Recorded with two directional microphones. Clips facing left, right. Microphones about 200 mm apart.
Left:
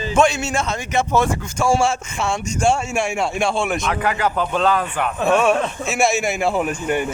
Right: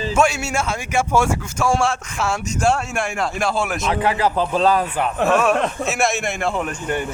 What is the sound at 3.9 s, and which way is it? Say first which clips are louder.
Speech: right 2 dB; 30° right (ahead or behind).